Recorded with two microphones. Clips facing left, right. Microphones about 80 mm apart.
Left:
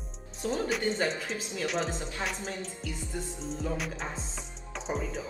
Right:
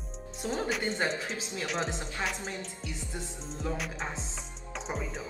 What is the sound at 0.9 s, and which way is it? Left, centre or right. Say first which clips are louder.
Speech: left 3 dB; right.